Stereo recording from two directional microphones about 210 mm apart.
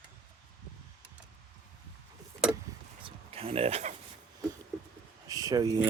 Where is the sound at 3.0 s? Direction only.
30° right (ahead or behind).